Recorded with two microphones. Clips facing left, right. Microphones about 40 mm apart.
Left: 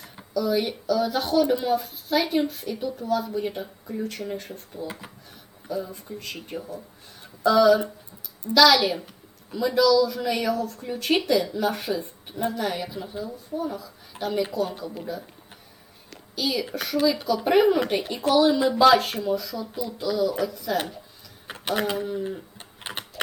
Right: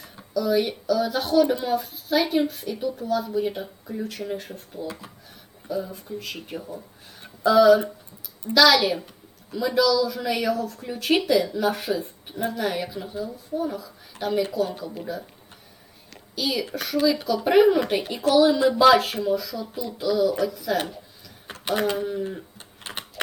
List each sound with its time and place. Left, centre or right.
0.3 s speech: centre
4.9 s speech: left
5.6 s speech: centre
16.0 s a sound: centre
16.7 s speech: centre
22.9 s a sound: centre